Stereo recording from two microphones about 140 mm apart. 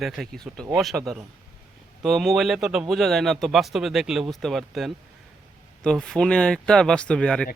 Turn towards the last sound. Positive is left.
turn(degrees=5)  # may be behind; listen again after turning